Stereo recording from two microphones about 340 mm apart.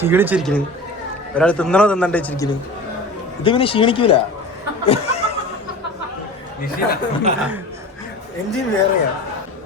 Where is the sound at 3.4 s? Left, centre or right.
Centre.